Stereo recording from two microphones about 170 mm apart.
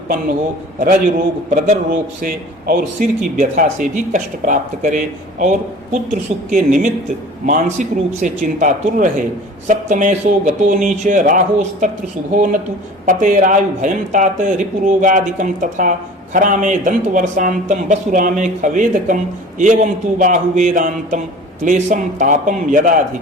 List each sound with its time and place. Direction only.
0.8 s speech: 50° right (ahead or behind)
2.7 s speech: 55° right (ahead or behind)